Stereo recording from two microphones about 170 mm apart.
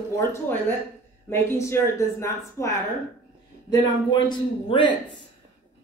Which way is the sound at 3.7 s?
25° left (ahead or behind).